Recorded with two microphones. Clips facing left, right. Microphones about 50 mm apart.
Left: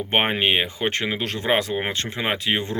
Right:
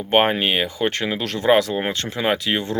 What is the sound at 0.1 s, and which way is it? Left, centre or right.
Speech, left.